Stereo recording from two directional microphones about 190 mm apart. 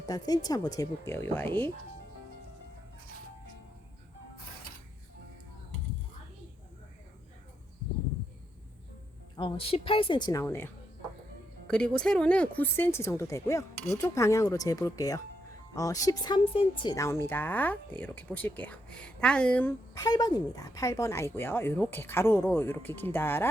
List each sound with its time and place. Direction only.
0.0 s speech: 20° left (ahead or behind)
9.3 s a woman's voice: 30° left (ahead or behind); by 10.7 s 10° left (ahead or behind)
11.7 s speech: 5° left (ahead or behind)
19.9 s speech: 20° left (ahead or behind)